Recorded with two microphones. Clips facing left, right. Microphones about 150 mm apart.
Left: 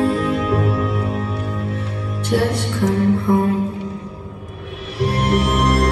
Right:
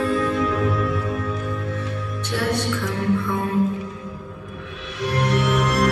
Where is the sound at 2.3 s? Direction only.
40° left (ahead or behind).